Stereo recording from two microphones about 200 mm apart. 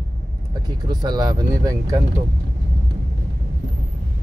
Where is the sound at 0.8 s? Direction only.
20° right (ahead or behind).